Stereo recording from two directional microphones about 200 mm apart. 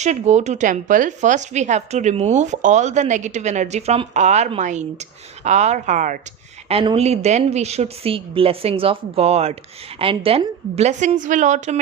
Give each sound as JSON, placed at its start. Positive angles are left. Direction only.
{"t": 0.0, "sound": "speech", "side_deg": -35}